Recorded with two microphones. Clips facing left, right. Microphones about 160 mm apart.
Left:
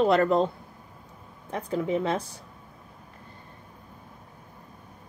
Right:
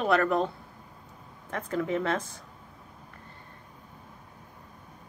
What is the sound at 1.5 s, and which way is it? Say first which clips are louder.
Speech: left 2 dB; 15° left (ahead or behind).